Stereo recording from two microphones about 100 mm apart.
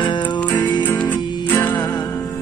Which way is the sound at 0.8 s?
15° left (ahead or behind).